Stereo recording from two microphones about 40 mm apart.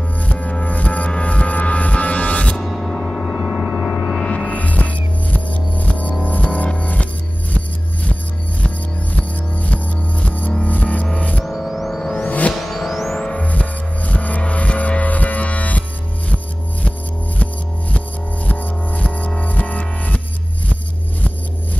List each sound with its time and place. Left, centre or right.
0.2 s music: left
2.9 s gong: centre
3.4 s a sound: centre
4.2 s music: left
11.4 s music: centre
12.0 s music: centre
12.3 s music: left
12.5 s music: centre
13.2 s music: left
18.5 s music: left